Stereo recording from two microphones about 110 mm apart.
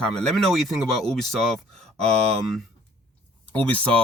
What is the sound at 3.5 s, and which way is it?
Speech, 15° left (ahead or behind).